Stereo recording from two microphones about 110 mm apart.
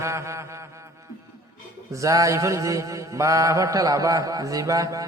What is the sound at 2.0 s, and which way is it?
Mantra, 30° right (ahead or behind).